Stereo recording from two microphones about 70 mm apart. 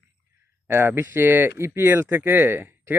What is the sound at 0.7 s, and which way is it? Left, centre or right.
Speech, right.